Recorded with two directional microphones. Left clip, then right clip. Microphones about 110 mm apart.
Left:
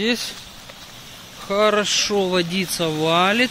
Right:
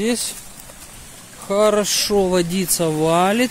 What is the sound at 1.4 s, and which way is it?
Speech, 50° right (ahead or behind).